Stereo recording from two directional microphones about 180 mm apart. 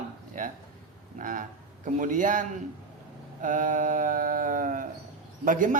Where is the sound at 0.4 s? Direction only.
50° right (ahead or behind).